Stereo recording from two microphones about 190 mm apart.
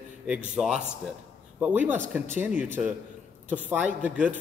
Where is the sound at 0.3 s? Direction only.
5° right (ahead or behind).